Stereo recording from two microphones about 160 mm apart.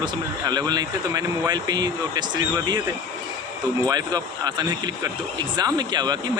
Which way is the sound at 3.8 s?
25° right (ahead or behind).